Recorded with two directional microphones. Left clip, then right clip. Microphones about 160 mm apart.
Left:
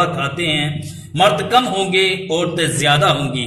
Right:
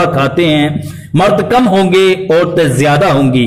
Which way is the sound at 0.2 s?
50° right (ahead or behind).